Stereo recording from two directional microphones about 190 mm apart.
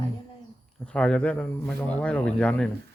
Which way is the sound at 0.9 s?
5° left (ahead or behind).